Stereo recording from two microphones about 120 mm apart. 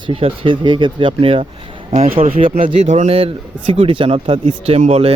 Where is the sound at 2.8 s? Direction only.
75° right (ahead or behind).